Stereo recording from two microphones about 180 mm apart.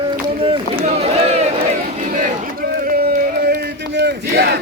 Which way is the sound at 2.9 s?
55° right (ahead or behind).